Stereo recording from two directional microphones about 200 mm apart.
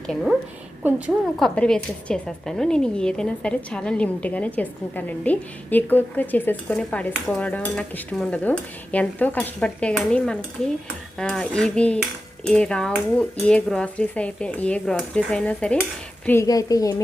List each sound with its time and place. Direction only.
0.1 s a woman's voice: centre (ahead or behind)
7.1 s cutlery: 5° left (ahead or behind)
11.2 s a woman's voice: 5° left (ahead or behind)
16.2 s cutlery: 15° left (ahead or behind)